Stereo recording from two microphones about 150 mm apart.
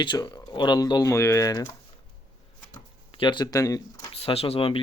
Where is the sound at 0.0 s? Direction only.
30° left (ahead or behind).